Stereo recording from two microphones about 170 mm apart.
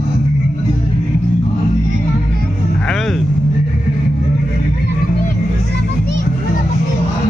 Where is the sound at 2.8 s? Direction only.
Centre (ahead or behind).